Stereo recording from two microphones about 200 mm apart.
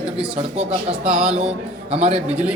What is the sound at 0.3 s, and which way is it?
A man's voice, 30° right (ahead or behind).